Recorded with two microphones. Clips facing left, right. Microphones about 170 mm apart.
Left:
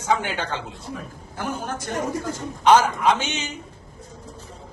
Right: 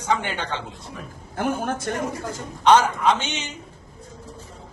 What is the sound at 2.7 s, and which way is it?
Speech, 10° left (ahead or behind).